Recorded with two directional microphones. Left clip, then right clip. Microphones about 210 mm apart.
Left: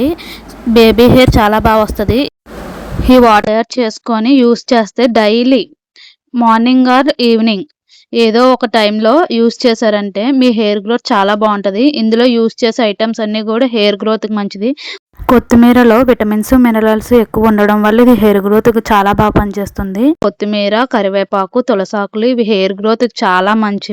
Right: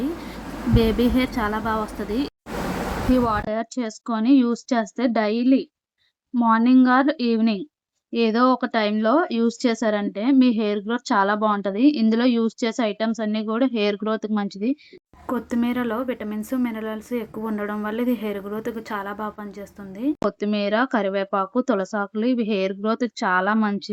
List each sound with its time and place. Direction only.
0.7 s speech: 45° left (ahead or behind)